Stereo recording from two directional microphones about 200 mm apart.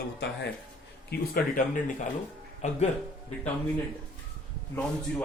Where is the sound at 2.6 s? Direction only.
35° left (ahead or behind).